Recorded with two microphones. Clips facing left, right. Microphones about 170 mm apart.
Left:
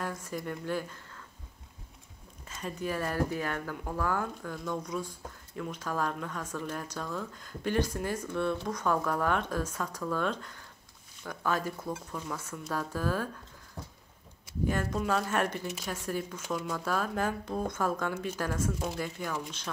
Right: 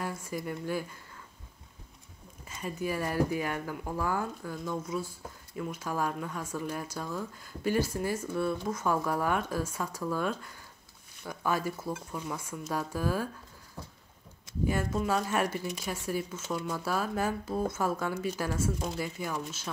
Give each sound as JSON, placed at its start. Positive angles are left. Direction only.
{"t": 0.0, "sound": "speech", "side_deg": -10}
{"t": 2.4, "sound": "speech", "side_deg": -10}
{"t": 13.8, "sound": "a sound", "side_deg": 15}
{"t": 14.7, "sound": "speech", "side_deg": -5}